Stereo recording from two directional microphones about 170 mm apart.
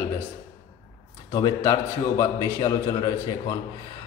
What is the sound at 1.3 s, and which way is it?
A man's voice, 20° left (ahead or behind).